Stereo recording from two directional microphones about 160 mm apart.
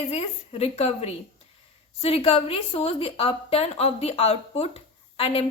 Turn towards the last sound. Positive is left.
turn(degrees=40)  # may be behind; listen again after turning